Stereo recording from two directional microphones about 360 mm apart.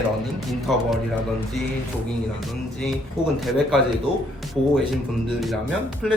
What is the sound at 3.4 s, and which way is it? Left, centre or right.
Speech, centre.